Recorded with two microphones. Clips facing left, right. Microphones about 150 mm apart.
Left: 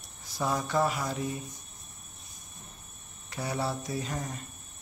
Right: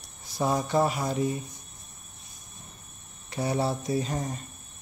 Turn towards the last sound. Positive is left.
turn(degrees=-30)  # may be behind; listen again after turning